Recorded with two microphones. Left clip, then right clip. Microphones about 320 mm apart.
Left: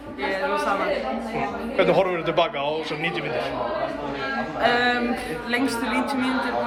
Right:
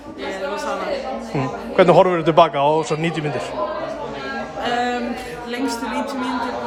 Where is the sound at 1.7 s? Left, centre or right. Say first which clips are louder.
Right 7 dB; right.